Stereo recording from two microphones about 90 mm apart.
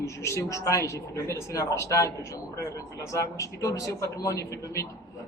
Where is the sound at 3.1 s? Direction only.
35° left (ahead or behind).